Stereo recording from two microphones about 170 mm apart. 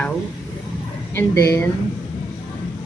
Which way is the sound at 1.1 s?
15° left (ahead or behind).